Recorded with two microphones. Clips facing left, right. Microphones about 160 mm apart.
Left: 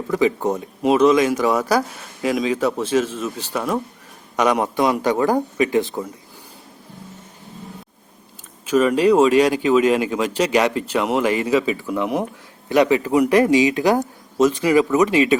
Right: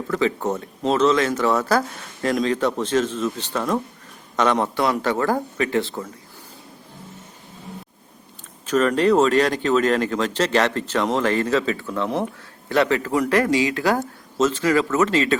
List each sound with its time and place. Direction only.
0.1 s speech: 10° left (ahead or behind)
8.6 s speech: 10° left (ahead or behind)